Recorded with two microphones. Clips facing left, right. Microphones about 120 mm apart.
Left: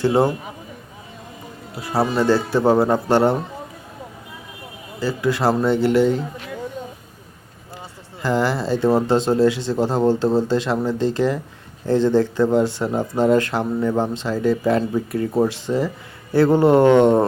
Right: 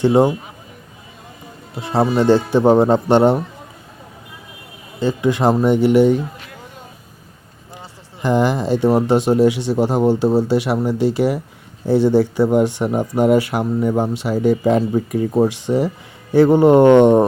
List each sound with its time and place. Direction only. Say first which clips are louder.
0.0 s speech: right 4 dB; 15° right (ahead or behind)
1.7 s speech: right 3 dB; 25° right (ahead or behind)
4.9 s speech: right 3 dB; 20° right (ahead or behind)
8.2 s speech: right 3 dB; 20° right (ahead or behind)